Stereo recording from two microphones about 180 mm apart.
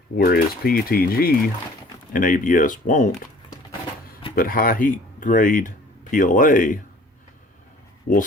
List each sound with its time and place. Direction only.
0.2 s speech: 55° left (ahead or behind)
4.4 s speech: 55° left (ahead or behind)
8.1 s speech: 55° left (ahead or behind)